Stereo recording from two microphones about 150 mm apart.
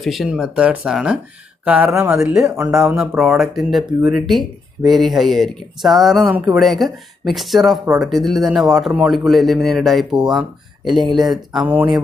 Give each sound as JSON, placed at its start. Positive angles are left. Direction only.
{"t": 0.0, "sound": "a man's voice", "side_deg": 0}
{"t": 2.0, "sound": "speech", "side_deg": -20}
{"t": 3.0, "sound": "a man's voice", "side_deg": 0}